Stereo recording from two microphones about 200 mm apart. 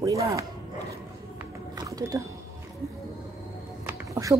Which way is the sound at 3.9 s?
15° right (ahead or behind).